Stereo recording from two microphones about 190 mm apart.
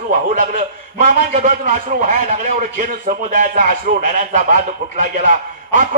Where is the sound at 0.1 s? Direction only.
40° right (ahead or behind).